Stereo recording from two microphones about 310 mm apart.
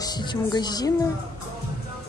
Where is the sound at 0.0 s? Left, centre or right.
Centre.